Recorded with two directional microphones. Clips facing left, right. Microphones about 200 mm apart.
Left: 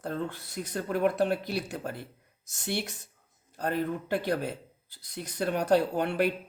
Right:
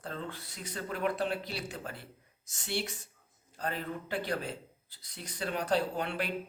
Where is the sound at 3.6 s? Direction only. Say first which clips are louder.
Left 7 dB; 50° left (ahead or behind).